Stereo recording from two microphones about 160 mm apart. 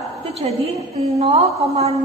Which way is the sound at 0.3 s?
40° right (ahead or behind).